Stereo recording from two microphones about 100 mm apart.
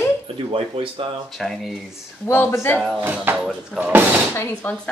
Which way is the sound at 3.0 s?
20° right (ahead or behind).